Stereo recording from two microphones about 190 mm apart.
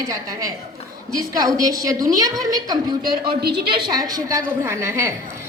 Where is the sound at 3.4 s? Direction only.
55° right (ahead or behind).